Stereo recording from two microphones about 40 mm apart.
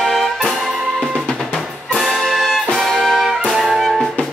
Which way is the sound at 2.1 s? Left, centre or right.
Centre.